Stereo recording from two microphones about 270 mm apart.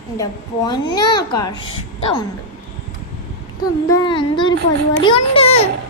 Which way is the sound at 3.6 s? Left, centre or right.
Centre.